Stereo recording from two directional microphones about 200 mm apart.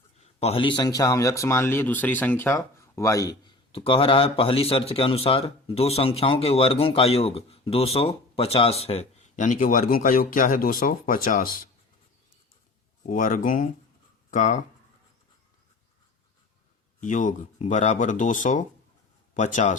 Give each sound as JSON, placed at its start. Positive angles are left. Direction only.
{"t": 0.2, "sound": "speech", "side_deg": 30}
{"t": 13.0, "sound": "speech", "side_deg": 40}
{"t": 17.0, "sound": "speech", "side_deg": 40}